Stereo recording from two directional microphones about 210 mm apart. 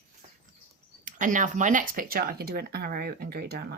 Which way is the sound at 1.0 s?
40° right (ahead or behind).